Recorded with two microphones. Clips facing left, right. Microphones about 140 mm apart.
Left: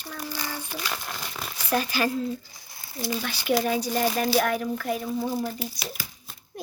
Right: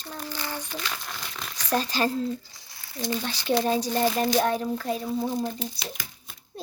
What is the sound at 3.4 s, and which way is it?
Speech, 30° right (ahead or behind).